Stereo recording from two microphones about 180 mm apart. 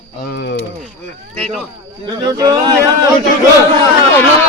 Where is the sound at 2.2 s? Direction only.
20° right (ahead or behind).